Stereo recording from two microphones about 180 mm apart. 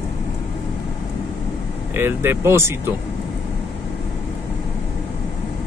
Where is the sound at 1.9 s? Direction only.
10° right (ahead or behind).